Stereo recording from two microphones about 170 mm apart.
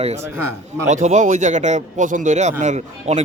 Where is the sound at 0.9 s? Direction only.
45° right (ahead or behind).